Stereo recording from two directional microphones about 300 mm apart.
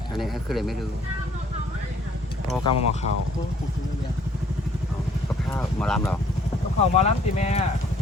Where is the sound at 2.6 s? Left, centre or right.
Left.